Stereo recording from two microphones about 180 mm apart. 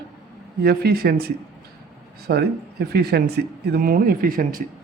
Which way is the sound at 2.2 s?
60° right (ahead or behind).